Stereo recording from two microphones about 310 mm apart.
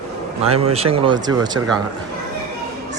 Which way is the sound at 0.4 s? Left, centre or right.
Centre.